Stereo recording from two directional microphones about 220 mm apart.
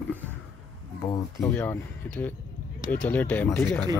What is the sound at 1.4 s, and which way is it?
Speech, 5° left (ahead or behind).